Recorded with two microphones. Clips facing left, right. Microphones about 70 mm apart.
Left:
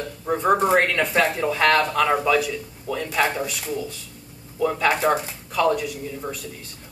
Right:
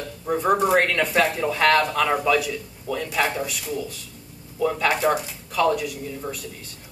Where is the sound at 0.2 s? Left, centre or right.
Centre.